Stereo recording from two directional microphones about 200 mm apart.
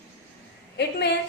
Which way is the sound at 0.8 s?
55° left (ahead or behind).